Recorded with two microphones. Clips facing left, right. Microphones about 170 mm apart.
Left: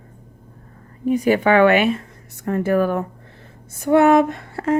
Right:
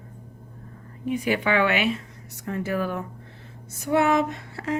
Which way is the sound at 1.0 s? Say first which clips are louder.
Left 8 dB; 40° left (ahead or behind).